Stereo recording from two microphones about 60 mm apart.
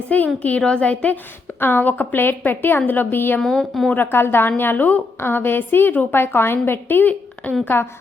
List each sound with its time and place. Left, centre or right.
0.1 s a woman's voice: left
1.5 s a woman's voice: left
3.4 s a woman's voice: centre
3.9 s a woman's voice: left